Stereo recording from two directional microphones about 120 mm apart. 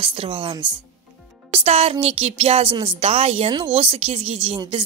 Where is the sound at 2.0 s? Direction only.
55° right (ahead or behind).